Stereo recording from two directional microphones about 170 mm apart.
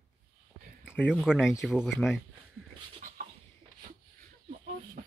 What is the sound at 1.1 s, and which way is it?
Speech, 5° right (ahead or behind).